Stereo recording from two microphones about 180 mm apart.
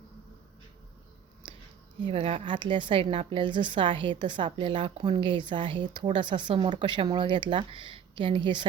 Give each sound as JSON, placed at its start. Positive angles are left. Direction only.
{"t": 2.0, "sound": "a woman's voice", "side_deg": -30}